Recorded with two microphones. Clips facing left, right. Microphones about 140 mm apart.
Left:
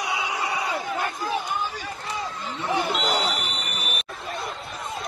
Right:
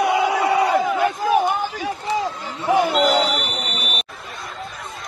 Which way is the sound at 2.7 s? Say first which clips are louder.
Right 8 dB; 55° right (ahead or behind).